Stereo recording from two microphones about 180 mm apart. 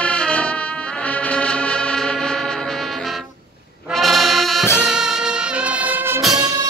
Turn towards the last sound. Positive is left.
turn(degrees=-5)  # may be behind; listen again after turning